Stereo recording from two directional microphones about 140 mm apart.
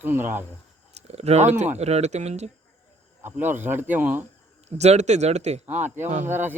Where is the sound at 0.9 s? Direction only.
50° right (ahead or behind).